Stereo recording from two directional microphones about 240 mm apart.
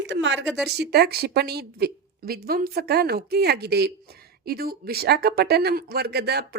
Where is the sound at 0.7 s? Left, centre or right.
Right.